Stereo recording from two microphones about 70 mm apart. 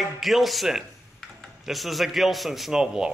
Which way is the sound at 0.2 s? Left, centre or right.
Centre.